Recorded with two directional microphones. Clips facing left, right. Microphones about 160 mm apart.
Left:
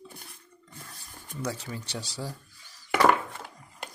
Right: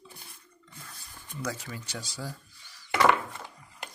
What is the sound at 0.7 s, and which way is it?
Dishes, 40° left (ahead or behind).